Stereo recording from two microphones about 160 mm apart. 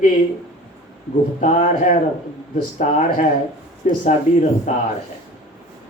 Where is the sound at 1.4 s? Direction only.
50° left (ahead or behind).